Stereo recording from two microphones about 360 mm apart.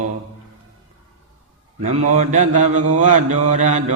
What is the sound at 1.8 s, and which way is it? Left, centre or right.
Mantra, centre.